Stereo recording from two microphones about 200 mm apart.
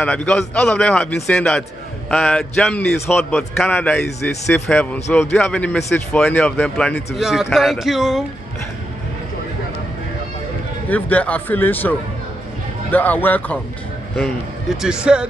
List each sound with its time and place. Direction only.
0.0 s a man's voice: 5° left (ahead or behind)
10.9 s speech: 5° left (ahead or behind)
14.8 s a man's voice: 5° right (ahead or behind)